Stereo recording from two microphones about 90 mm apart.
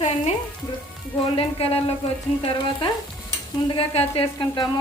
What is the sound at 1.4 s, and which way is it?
Speech, 90° left.